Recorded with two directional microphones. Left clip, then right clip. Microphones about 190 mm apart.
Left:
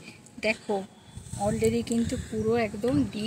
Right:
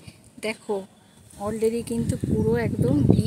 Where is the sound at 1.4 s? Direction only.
55° right (ahead or behind).